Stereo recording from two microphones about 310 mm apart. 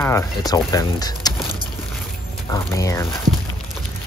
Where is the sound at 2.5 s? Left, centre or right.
Centre.